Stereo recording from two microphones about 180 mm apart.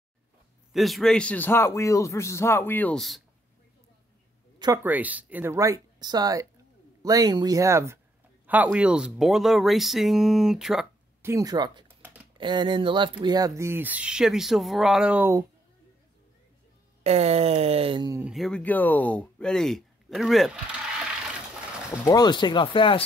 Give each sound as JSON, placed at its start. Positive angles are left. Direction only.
{"t": 0.7, "sound": "a man's voice", "side_deg": 0}
{"t": 4.8, "sound": "speech", "side_deg": -10}
{"t": 11.2, "sound": "speech", "side_deg": -20}
{"t": 17.0, "sound": "speech", "side_deg": -35}
{"t": 18.2, "sound": "speech", "side_deg": 0}
{"t": 22.0, "sound": "speech", "side_deg": 20}